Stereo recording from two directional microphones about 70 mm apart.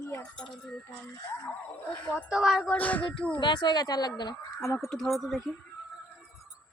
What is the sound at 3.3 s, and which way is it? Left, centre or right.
Speech, left.